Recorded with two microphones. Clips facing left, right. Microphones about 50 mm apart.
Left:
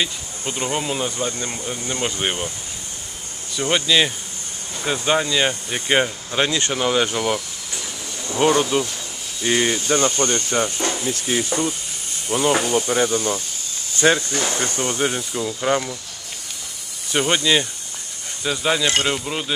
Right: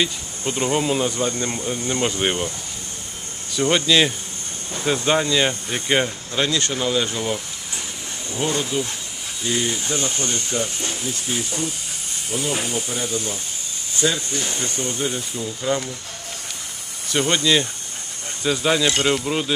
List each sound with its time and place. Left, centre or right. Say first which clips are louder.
0.0 s speech: right 2 dB; centre
3.5 s speech: right 1 dB; centre; by 10.1 s left
10.2 s speech: left 4 dB; left
14.0 s speech: left 5 dB; left
17.1 s speech: even; centre
18.4 s speech: right 1 dB; centre